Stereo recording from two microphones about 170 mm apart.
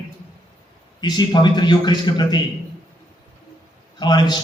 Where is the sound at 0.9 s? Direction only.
25° left (ahead or behind).